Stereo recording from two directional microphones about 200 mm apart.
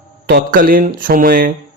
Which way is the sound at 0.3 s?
45° right (ahead or behind).